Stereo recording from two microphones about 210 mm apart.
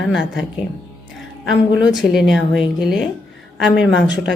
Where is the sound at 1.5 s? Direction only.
Centre (ahead or behind).